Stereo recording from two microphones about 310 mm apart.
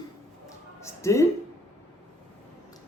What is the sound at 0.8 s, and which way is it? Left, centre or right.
Speech, centre.